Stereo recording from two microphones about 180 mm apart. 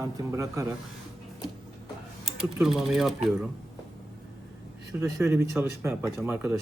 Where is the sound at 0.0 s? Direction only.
15° right (ahead or behind).